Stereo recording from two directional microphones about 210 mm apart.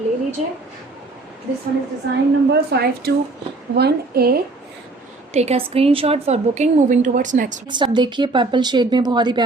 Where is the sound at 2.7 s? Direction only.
50° right (ahead or behind).